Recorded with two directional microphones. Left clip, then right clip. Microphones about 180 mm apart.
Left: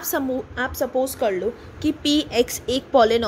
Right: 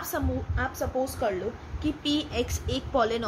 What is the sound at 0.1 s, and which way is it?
A woman's voice, 50° left (ahead or behind).